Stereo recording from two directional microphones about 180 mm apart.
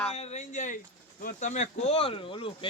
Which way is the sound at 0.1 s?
40° left (ahead or behind).